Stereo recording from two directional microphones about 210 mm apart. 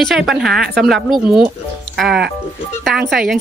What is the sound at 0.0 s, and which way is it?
A woman's voice, centre (ahead or behind).